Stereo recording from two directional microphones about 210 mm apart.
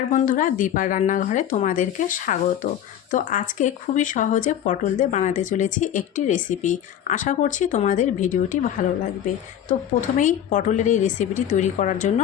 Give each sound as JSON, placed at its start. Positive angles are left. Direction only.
{"t": 0.1, "sound": "speech", "side_deg": 35}
{"t": 10.2, "sound": "speech", "side_deg": 35}